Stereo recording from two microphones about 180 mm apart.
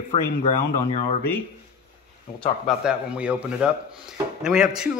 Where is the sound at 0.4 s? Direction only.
35° left (ahead or behind).